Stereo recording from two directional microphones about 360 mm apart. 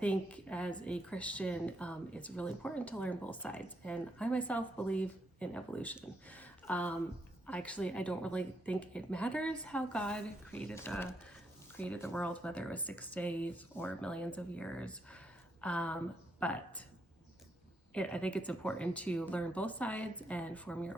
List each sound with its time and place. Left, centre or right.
0.0 s a woman's voice: centre
17.9 s a woman's voice: centre